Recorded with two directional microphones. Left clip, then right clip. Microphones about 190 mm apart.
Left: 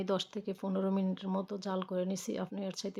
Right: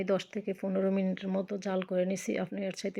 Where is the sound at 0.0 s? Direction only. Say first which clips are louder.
Right 3 dB; 10° left (ahead or behind).